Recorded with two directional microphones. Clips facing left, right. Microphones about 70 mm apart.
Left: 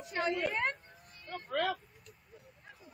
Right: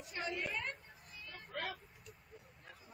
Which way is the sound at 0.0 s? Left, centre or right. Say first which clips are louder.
Left 8 dB; left.